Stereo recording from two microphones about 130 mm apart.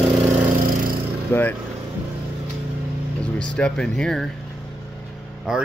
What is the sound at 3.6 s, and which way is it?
Speech, 5° left (ahead or behind).